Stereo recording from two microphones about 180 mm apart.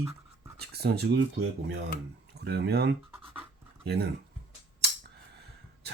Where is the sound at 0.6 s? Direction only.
65° right (ahead or behind).